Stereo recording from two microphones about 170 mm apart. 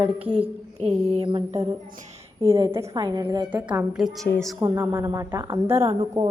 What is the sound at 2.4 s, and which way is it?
A woman's voice, 20° right (ahead or behind).